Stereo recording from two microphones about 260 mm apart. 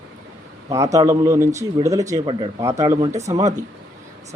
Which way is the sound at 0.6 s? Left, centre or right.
Centre.